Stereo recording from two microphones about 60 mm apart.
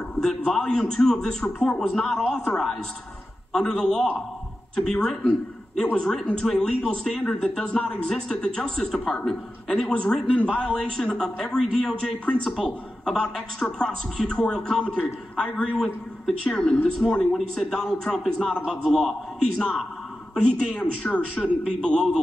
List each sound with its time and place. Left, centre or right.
0.5 s speech: centre
21.0 s speech: left
21.6 s speech: centre